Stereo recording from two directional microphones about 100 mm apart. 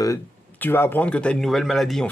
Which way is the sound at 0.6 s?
20° left (ahead or behind).